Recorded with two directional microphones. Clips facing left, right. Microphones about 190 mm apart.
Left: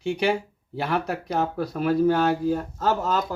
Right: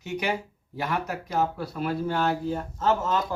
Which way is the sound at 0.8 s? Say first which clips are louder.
Left 4 dB; 35° left (ahead or behind).